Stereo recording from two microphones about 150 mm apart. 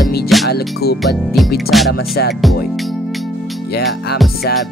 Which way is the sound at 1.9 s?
90° left.